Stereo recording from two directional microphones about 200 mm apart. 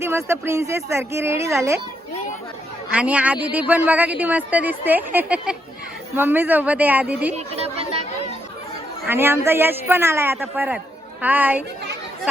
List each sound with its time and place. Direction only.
0.0 s a man's voice: 15° right (ahead or behind)
2.9 s a man's voice: 5° right (ahead or behind)
7.3 s speech: 30° right (ahead or behind)
9.0 s a man's voice: 10° right (ahead or behind)